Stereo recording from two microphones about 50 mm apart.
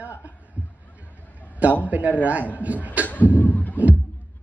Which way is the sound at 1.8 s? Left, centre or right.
Right.